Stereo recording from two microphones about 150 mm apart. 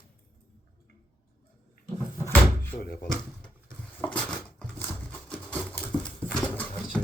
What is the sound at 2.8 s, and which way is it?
Speech, 90° left.